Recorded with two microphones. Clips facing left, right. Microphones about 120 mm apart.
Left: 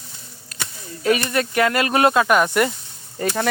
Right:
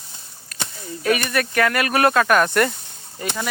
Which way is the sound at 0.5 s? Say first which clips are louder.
Right 1 dB; 25° left (ahead or behind).